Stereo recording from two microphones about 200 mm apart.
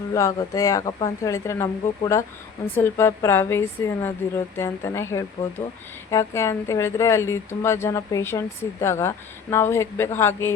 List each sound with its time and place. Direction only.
0.1 s a woman's voice: 15° left (ahead or behind)